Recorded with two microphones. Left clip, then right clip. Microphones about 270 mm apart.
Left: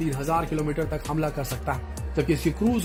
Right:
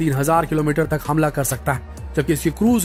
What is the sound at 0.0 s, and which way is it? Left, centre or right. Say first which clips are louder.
A man's voice: right 8 dB; right.